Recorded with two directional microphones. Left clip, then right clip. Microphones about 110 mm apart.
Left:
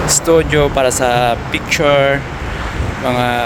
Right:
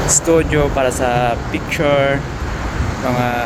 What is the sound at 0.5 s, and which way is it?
Speech, 50° left (ahead or behind).